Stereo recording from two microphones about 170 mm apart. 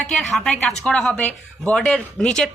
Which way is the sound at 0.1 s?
Centre (ahead or behind).